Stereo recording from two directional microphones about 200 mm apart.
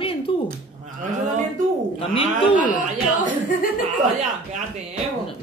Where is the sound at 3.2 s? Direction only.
40° left (ahead or behind).